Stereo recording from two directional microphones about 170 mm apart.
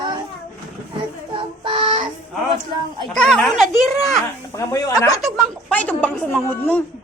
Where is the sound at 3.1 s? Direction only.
5° left (ahead or behind).